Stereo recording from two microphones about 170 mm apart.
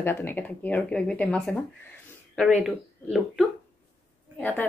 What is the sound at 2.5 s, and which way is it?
Speech, 10° right (ahead or behind).